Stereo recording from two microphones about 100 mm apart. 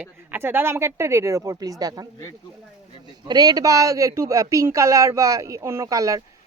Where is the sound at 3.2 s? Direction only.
40° right (ahead or behind).